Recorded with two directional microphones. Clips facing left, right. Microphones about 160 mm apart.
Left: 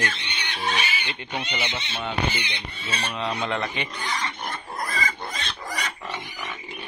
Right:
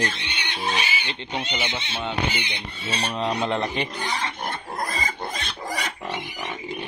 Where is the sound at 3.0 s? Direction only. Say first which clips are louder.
Right 3 dB; 35° right (ahead or behind).